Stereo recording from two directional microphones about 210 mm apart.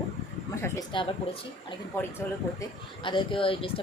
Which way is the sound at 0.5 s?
15° left (ahead or behind).